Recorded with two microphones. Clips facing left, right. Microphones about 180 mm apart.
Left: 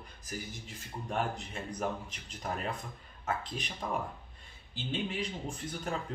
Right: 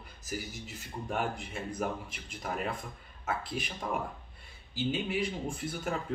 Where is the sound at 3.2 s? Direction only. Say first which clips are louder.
Right 1 dB; 5° right (ahead or behind).